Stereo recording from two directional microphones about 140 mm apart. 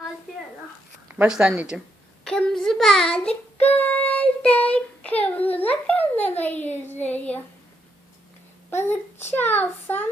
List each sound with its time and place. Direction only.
1.0 s speech: 10° right (ahead or behind)
2.2 s child singing: 5° left (ahead or behind)
5.5 s a child's voice: 10° left (ahead or behind)
8.7 s a child's voice: 15° left (ahead or behind)